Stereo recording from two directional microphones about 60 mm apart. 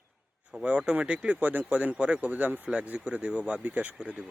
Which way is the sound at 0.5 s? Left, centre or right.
Centre.